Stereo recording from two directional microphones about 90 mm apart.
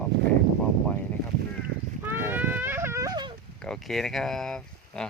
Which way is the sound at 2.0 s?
25° right (ahead or behind).